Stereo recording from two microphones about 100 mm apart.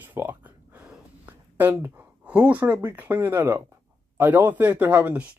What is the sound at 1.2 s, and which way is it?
Speech, 20° right (ahead or behind).